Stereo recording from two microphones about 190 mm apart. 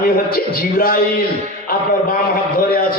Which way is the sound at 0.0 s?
50° left (ahead or behind).